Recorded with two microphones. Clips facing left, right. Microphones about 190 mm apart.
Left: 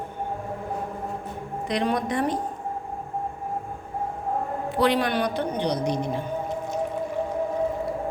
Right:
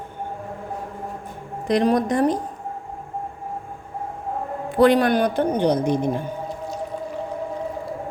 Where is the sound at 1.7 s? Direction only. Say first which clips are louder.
Right 7 dB; 45° right (ahead or behind).